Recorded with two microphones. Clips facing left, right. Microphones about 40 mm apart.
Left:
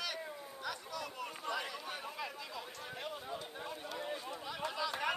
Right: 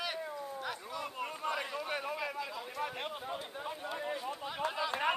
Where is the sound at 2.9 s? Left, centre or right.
Right.